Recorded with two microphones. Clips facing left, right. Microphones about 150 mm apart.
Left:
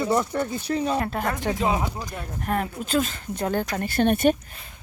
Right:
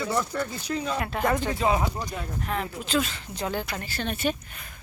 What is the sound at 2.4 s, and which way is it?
Speech, 50° left (ahead or behind).